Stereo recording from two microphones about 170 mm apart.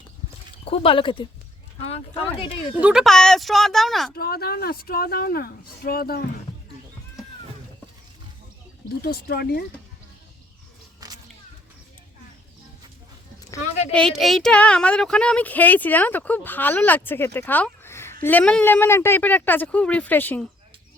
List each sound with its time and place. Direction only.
0.6 s speech: 35° left (ahead or behind)
2.8 s speech: centre (ahead or behind)
4.1 s speech: 65° left (ahead or behind)
9.0 s speech: 60° left (ahead or behind)
11.0 s a sound: 20° right (ahead or behind)
13.9 s speech: centre (ahead or behind)